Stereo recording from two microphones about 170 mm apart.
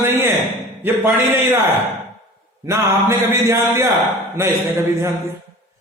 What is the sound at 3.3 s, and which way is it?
Speech, 15° right (ahead or behind).